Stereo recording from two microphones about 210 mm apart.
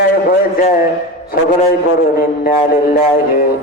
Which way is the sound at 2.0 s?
45° left (ahead or behind).